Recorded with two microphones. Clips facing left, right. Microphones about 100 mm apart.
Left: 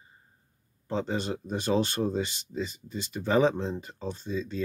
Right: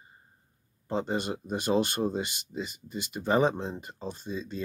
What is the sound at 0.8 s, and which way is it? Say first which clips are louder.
Speech: even; 10° right (ahead or behind).